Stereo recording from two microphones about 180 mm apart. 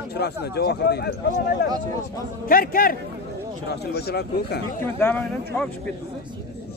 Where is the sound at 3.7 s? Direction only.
65° left (ahead or behind).